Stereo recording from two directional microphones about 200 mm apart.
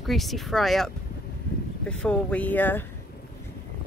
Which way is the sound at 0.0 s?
Centre (ahead or behind).